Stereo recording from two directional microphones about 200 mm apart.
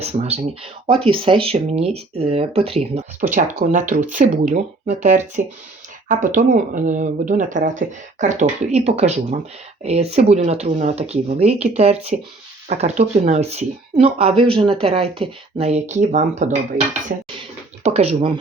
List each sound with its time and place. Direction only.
0.0 s speech: 30° right (ahead or behind)
17.8 s speech: 30° right (ahead or behind)